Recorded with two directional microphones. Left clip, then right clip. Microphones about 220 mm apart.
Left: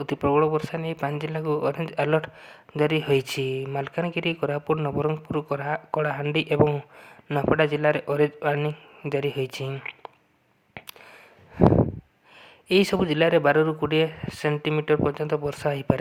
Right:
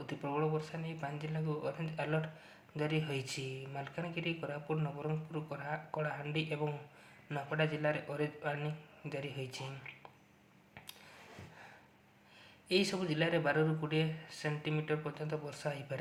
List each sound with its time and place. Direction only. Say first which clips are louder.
0.0 s speech: left 15 dB; 45° left (ahead or behind)
12.6 s speech: left 12 dB; 45° left (ahead or behind)